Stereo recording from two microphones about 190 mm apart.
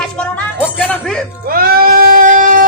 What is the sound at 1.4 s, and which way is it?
Bleat, 50° right (ahead or behind).